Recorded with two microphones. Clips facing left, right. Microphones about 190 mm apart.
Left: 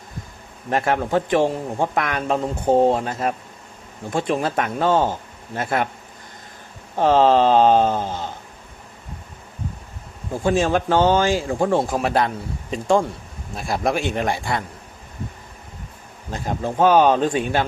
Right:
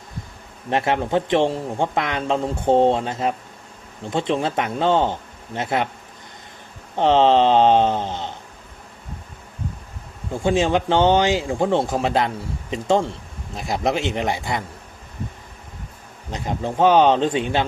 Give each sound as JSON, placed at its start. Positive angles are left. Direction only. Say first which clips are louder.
{"t": 0.7, "sound": "a man's voice", "louder": "even", "side_deg": -20}
{"t": 6.9, "sound": "a man's voice", "louder": "even", "side_deg": -25}
{"t": 10.4, "sound": "a man's voice", "louder": "even", "side_deg": -20}
{"t": 16.3, "sound": "a man's voice", "louder": "even", "side_deg": -20}